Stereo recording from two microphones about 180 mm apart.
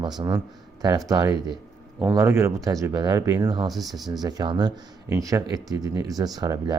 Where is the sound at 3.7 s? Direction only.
Centre (ahead or behind).